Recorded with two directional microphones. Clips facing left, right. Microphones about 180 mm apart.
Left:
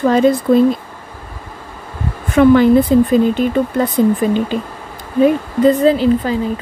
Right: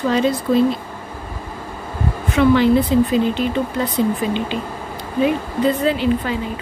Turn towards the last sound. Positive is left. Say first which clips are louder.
# left 6 dB
turn(degrees=35)  # may be behind; listen again after turning